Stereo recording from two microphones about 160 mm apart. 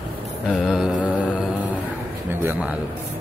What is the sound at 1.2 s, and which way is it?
Mantra, 5° right (ahead or behind).